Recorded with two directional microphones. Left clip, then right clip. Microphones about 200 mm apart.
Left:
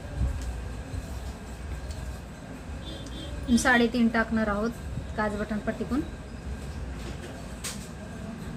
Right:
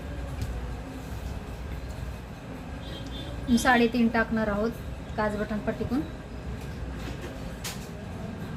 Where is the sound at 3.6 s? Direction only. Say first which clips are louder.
Even; 15° left (ahead or behind).